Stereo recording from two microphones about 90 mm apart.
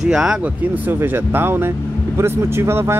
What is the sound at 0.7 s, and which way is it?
Speech, 20° right (ahead or behind).